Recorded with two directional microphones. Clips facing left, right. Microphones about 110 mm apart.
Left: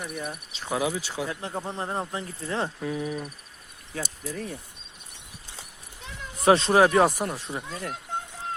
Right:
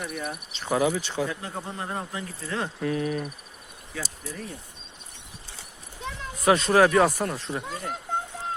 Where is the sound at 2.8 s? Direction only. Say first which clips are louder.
Right 3 dB; 5° left (ahead or behind).